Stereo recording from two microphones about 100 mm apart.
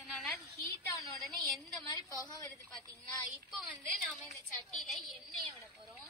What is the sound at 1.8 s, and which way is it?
Speech, 30° left (ahead or behind).